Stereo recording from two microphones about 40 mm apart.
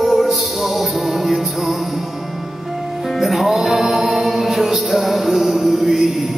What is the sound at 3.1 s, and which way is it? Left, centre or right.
Music, centre.